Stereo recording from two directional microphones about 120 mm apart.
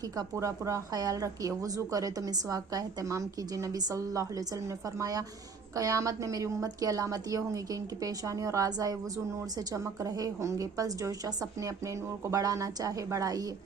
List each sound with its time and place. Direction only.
0.2 s a woman's voice: 25° right (ahead or behind)
12.3 s a woman's voice: 30° right (ahead or behind)